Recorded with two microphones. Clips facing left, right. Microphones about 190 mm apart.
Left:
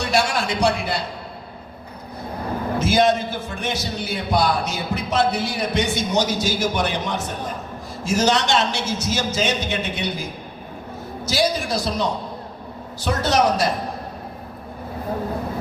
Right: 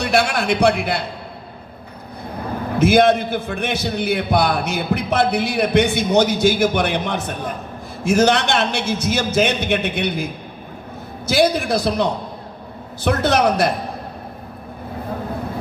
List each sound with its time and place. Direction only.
0.0 s a man's voice: 60° right (ahead or behind)
2.7 s a man's voice: 60° right (ahead or behind)
11.3 s a man's voice: 60° right (ahead or behind)